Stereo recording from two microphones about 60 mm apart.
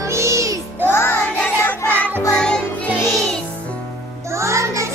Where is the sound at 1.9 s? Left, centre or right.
Left.